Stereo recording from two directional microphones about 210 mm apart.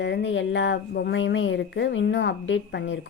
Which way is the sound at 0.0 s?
55° left (ahead or behind).